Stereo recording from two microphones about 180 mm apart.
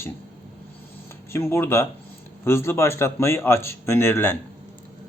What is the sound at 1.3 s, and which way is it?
Speech, 15° left (ahead or behind).